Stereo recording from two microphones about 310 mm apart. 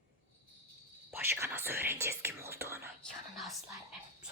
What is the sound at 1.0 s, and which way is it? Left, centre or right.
Whispering, centre.